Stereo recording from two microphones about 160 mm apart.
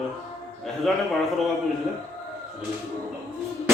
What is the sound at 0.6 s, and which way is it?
Speech, centre (ahead or behind).